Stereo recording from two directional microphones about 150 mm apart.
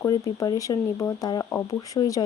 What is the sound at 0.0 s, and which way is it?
Speech, 25° left (ahead or behind).